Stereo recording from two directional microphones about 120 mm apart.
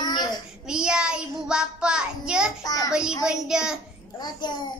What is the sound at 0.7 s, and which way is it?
Child singing, 5° right (ahead or behind).